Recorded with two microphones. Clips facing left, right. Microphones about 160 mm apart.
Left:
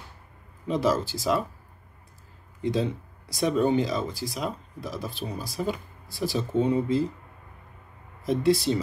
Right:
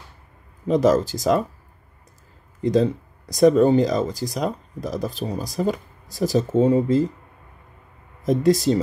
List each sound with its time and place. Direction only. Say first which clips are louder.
0.7 s speech: right 7 dB; 45° right (ahead or behind)
2.6 s speech: right 7 dB; 40° right (ahead or behind)
8.2 s speech: right 4 dB; 45° right (ahead or behind)